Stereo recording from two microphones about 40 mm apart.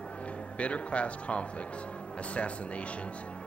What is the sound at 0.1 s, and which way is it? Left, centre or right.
Speech, left.